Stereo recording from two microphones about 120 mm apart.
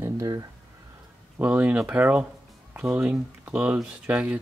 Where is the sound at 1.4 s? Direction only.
15° right (ahead or behind).